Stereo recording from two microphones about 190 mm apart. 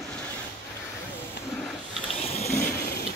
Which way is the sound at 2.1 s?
30° left (ahead or behind).